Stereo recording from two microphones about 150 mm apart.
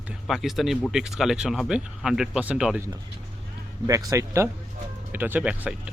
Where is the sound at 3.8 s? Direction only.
25° right (ahead or behind).